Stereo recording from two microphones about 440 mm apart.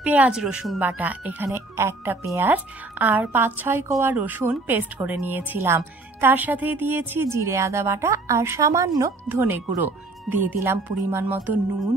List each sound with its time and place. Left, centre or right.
0.0 s speech: centre
10.3 s speech: right
10.6 s speech: centre